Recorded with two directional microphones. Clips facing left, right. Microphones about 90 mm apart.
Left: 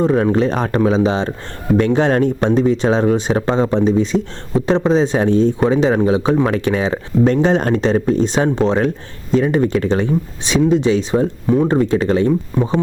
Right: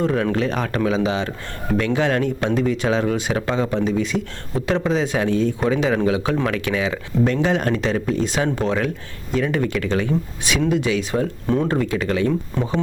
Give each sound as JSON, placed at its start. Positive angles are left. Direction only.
{"t": 0.0, "sound": "speech", "side_deg": 25}
{"t": 11.4, "sound": "speech", "side_deg": 15}
{"t": 12.5, "sound": "speech", "side_deg": 15}